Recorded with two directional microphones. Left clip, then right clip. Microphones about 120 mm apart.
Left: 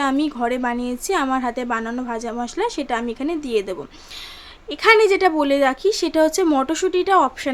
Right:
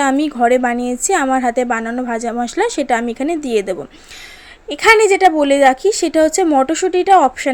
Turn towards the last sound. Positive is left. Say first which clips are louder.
# right 6 dB
turn(degrees=-25)  # may be behind; listen again after turning